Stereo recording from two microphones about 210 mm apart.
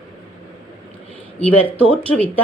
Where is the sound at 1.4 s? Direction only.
5° left (ahead or behind).